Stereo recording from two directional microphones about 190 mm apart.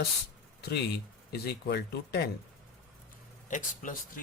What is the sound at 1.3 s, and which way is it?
Speech, 60° left (ahead or behind).